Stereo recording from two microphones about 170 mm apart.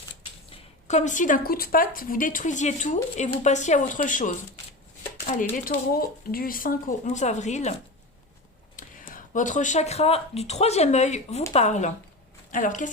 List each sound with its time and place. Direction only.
0.5 s speech: 45° left (ahead or behind)
8.7 s a woman's voice: 50° left (ahead or behind)